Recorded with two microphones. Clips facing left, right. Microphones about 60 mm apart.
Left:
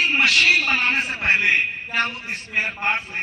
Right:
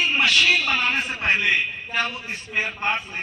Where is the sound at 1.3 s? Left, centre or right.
Left.